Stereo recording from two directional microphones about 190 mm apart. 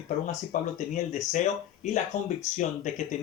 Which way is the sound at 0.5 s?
45° left (ahead or behind).